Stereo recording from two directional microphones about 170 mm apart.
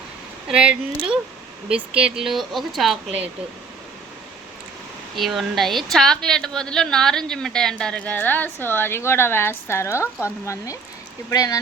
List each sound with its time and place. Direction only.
0.4 s a woman's voice: 5° right (ahead or behind)
5.1 s a woman's voice: centre (ahead or behind); by 11.6 s 20° left (ahead or behind)